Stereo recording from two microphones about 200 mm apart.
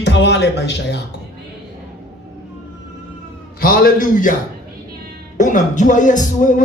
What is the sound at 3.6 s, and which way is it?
Speech, 45° left (ahead or behind).